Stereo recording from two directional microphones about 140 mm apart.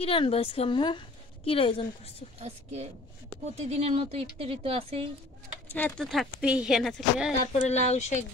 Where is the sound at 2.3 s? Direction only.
50° right (ahead or behind).